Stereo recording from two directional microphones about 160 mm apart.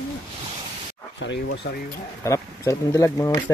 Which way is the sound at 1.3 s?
90° left.